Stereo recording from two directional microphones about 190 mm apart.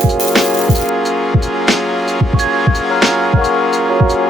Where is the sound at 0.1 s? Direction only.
Centre (ahead or behind).